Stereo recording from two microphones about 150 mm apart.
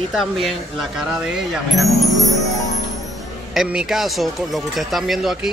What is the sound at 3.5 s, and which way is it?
Speech, 5° right (ahead or behind).